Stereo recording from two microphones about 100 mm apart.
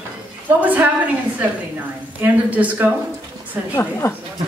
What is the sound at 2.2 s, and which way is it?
Speech, 15° right (ahead or behind).